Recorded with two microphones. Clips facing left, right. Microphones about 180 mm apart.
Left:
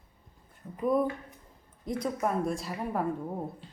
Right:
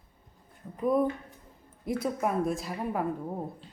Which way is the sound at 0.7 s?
Centre (ahead or behind).